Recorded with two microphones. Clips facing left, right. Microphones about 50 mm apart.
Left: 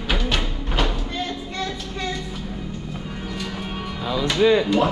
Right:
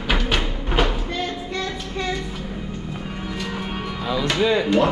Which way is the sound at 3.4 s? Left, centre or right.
Centre.